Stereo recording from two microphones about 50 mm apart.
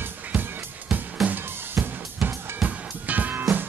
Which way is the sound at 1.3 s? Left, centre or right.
Right.